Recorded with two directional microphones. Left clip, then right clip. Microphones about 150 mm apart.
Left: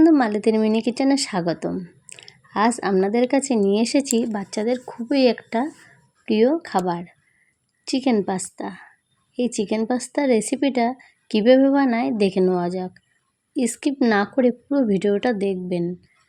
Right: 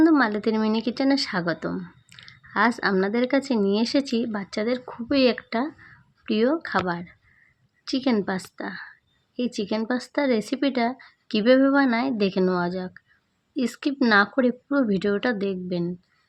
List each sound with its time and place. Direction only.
0.0 s speech: 20° left (ahead or behind)